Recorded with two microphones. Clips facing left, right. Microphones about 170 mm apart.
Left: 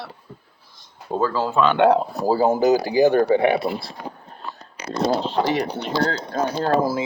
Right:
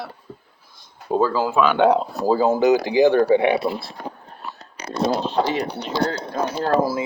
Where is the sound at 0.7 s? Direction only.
10° right (ahead or behind).